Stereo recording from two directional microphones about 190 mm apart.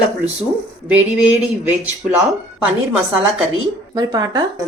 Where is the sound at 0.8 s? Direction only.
5° right (ahead or behind).